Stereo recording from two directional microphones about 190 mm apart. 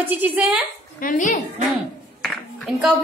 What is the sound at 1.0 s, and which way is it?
Speech, 45° left (ahead or behind).